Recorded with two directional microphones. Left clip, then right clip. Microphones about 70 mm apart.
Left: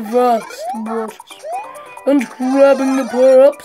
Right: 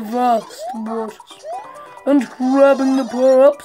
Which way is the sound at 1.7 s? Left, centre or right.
Left.